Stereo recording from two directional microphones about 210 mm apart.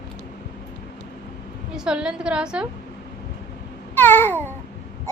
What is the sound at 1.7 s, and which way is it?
Speech, 5° right (ahead or behind).